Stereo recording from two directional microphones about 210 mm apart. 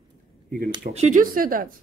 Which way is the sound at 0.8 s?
35° right (ahead or behind).